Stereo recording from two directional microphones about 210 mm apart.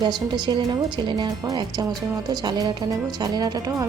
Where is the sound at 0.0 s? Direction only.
20° right (ahead or behind).